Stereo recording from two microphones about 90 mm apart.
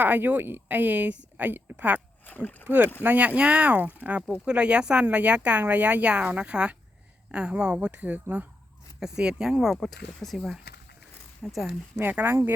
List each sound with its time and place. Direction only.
0.0 s speech: 20° right (ahead or behind)
2.2 s speech: 20° left (ahead or behind)
2.6 s speech: 20° right (ahead or behind)
9.8 s speech: 5° left (ahead or behind)
12.1 s speech: 20° right (ahead or behind)